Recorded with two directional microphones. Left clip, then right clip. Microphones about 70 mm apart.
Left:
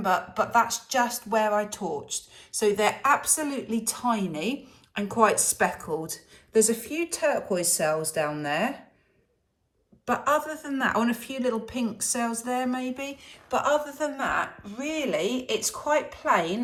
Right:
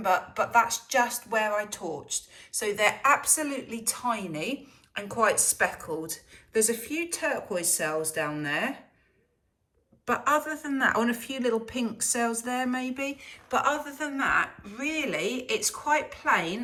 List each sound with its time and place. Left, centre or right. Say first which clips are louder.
0.0 s speech: left 1 dB; left
10.1 s speech: left 1 dB; left